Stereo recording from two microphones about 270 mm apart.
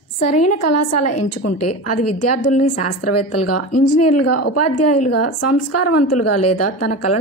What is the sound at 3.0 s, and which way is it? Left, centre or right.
A woman's voice, left.